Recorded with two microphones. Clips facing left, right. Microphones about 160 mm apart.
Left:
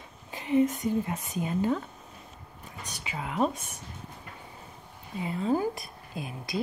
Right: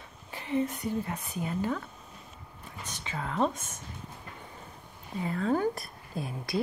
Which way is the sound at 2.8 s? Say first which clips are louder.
Even; 10° left (ahead or behind).